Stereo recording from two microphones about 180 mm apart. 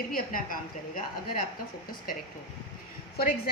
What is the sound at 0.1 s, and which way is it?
Speech, 50° left (ahead or behind).